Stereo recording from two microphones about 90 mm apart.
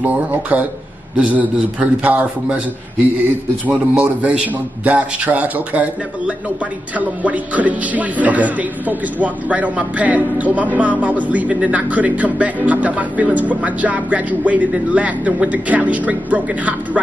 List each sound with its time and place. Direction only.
0.0 s speech: 15° right (ahead or behind)
3.6 s speech: 15° right (ahead or behind)